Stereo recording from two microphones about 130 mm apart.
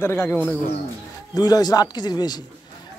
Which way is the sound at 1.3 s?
30° left (ahead or behind).